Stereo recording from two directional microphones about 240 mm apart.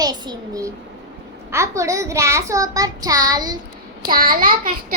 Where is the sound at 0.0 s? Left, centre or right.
Centre.